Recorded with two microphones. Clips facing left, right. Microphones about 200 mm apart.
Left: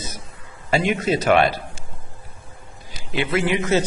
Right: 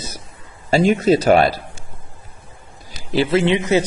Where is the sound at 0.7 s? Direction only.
35° right (ahead or behind).